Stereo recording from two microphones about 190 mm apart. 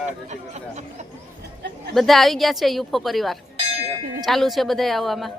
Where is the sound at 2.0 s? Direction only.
Centre (ahead or behind).